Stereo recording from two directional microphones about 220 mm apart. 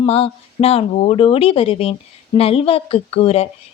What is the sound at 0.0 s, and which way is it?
A woman's voice, 25° left (ahead or behind).